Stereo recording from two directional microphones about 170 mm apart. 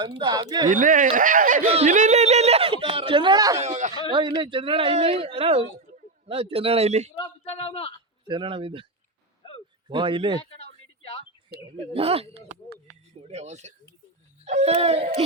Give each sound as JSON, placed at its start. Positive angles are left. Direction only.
{"t": 0.2, "sound": "speech", "side_deg": -25}
{"t": 0.7, "sound": "speech", "side_deg": -50}
{"t": 3.6, "sound": "speech", "side_deg": -45}
{"t": 4.1, "sound": "speech", "side_deg": -30}
{"t": 7.4, "sound": "a man's voice", "side_deg": 35}
{"t": 8.3, "sound": "speech", "side_deg": -30}
{"t": 9.4, "sound": "a sound", "side_deg": 30}
{"t": 9.9, "sound": "speech", "side_deg": -30}
{"t": 10.6, "sound": "a sound", "side_deg": 35}
{"t": 11.9, "sound": "speech", "side_deg": -35}